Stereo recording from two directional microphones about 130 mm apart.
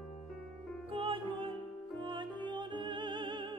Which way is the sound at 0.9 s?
40° right (ahead or behind).